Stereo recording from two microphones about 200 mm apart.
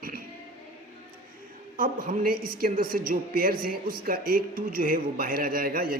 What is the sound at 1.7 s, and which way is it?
A man's voice, 45° right (ahead or behind).